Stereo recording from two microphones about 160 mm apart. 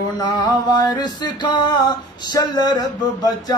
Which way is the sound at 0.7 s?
25° left (ahead or behind).